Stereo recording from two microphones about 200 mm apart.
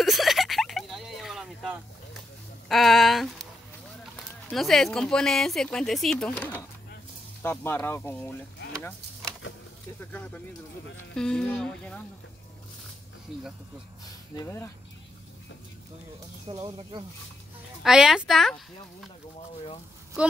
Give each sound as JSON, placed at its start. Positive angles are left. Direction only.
{"t": 0.0, "sound": "a sound", "side_deg": 0}
{"t": 2.7, "sound": "speech", "side_deg": 0}
{"t": 4.5, "sound": "speech", "side_deg": 0}
{"t": 9.4, "sound": "a sound", "side_deg": 70}
{"t": 10.1, "sound": "speech", "side_deg": 10}
{"t": 14.3, "sound": "speech", "side_deg": 15}
{"t": 16.4, "sound": "speech", "side_deg": -25}
{"t": 17.8, "sound": "speech", "side_deg": 0}